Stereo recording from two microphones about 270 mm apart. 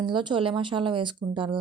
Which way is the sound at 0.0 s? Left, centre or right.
Centre.